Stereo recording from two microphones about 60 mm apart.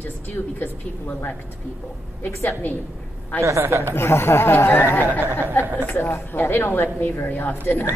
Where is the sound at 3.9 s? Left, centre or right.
Left.